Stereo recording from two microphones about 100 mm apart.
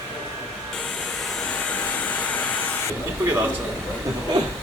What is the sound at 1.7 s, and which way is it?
Hair dryer, 15° left (ahead or behind).